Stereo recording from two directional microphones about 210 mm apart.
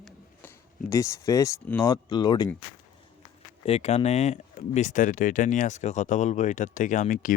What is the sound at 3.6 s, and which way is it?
Speech, 30° left (ahead or behind).